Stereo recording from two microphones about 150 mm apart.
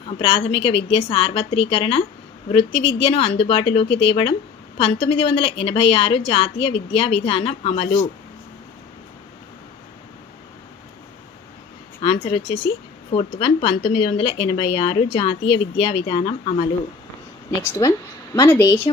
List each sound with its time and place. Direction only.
0.2 s speech: 35° left (ahead or behind)
12.0 s speech: 35° left (ahead or behind)
17.6 s speech: 25° left (ahead or behind)